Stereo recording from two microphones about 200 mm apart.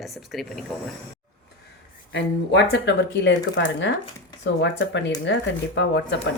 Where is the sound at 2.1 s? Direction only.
65° left (ahead or behind).